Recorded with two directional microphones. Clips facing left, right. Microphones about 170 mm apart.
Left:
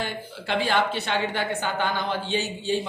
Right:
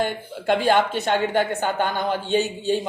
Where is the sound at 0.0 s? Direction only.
50° right (ahead or behind).